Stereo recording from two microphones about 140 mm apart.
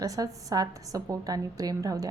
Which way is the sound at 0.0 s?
25° right (ahead or behind).